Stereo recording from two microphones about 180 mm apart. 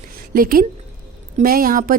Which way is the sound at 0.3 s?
55° right (ahead or behind).